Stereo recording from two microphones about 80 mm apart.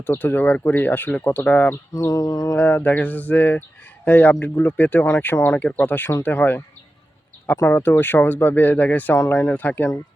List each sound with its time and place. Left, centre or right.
0.0 s speech: left
2.0 s mantra: left
2.6 s speech: centre